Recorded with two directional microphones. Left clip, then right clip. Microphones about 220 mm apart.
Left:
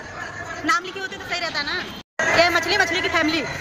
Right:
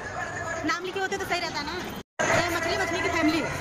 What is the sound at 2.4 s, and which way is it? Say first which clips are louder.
Speech: left 9 dB; 5° left (ahead or behind).